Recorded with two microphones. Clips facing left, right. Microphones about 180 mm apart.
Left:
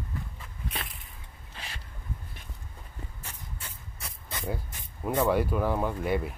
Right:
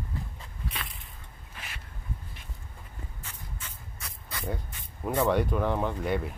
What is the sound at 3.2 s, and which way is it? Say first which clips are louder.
Spray: even; 35° left (ahead or behind).